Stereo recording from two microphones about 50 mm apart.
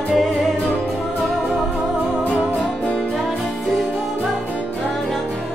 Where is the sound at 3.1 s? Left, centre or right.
Centre.